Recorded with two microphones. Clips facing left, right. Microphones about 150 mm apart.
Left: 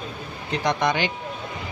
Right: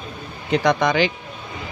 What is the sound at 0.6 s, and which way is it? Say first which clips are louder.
Speech: right 4 dB; 90° right.